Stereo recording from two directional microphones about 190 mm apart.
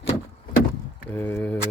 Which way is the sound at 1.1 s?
10° left (ahead or behind).